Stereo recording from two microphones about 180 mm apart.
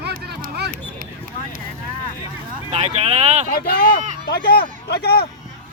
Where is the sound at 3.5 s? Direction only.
55° left (ahead or behind).